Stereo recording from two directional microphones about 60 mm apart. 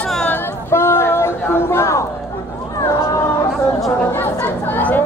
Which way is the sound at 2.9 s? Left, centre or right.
Left.